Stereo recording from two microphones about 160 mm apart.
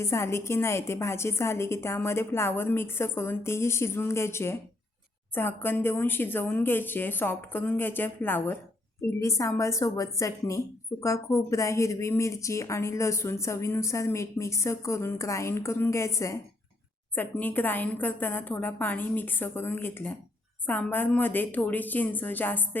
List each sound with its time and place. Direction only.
0.0 s a woman's voice: 15° left (ahead or behind)